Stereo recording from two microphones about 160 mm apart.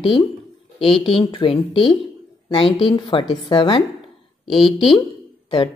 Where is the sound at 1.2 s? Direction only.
30° left (ahead or behind).